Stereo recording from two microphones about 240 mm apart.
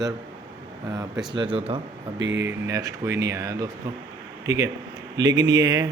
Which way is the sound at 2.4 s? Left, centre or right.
Centre.